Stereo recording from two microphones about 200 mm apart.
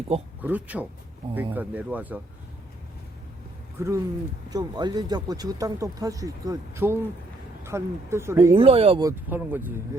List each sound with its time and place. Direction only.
0.4 s speech: 10° right (ahead or behind)
3.8 s speech: 15° right (ahead or behind)
8.5 s speech: 30° right (ahead or behind)
9.0 s speech: 10° right (ahead or behind)